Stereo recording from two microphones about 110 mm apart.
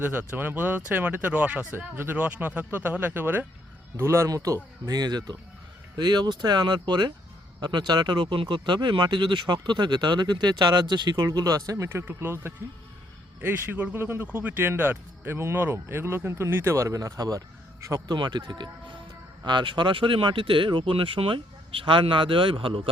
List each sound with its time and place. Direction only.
0.0 s speech: 20° right (ahead or behind)
18.1 s speech: 40° right (ahead or behind)